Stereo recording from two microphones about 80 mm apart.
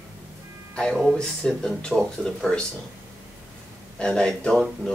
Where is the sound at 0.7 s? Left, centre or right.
Centre.